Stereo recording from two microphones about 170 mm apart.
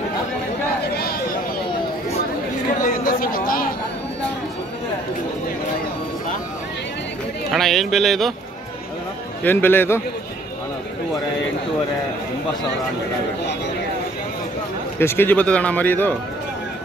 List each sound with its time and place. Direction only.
2.8 s chatter: 55° left (ahead or behind)
7.5 s speech: centre (ahead or behind)
9.4 s a man's voice: 10° left (ahead or behind)
15.0 s a man's voice: 15° left (ahead or behind)